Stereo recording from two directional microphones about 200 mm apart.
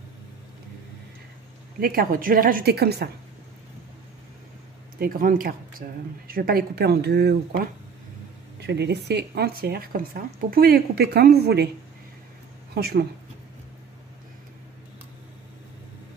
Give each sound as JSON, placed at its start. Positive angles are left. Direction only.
{"t": 1.8, "sound": "speech", "side_deg": -45}
{"t": 4.9, "sound": "speech", "side_deg": -45}
{"t": 12.7, "sound": "speech", "side_deg": -50}